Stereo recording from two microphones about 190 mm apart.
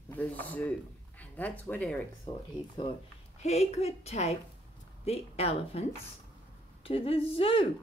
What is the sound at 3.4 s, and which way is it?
A woman's voice, 35° left (ahead or behind).